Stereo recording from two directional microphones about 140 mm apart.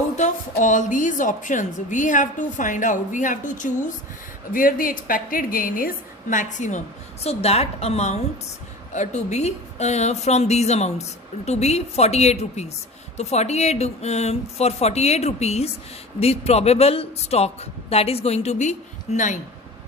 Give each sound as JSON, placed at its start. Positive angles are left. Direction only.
{"t": 0.2, "sound": "a woman's voice", "side_deg": 60}
{"t": 4.5, "sound": "a woman's voice", "side_deg": 80}
{"t": 6.3, "sound": "speech", "side_deg": 60}